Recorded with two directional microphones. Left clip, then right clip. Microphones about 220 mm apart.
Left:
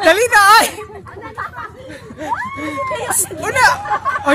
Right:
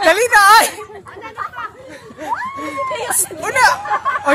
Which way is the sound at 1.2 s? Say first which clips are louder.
Right 1 dB; 5° right (ahead or behind).